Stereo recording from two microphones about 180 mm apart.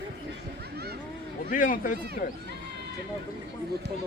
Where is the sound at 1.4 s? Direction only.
50° left (ahead or behind).